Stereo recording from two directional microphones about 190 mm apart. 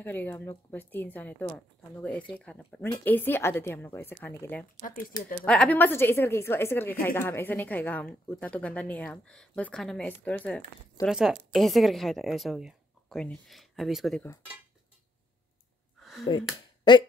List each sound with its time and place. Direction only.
0.0 s a woman's voice: 10° left (ahead or behind)
4.7 s speech: 45° left (ahead or behind)
5.4 s a woman's voice: 5° left (ahead or behind)
16.0 s a sound: centre (ahead or behind)
16.9 s speech: 25° left (ahead or behind)